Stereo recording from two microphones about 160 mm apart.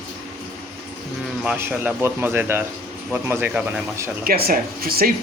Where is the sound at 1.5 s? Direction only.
15° right (ahead or behind).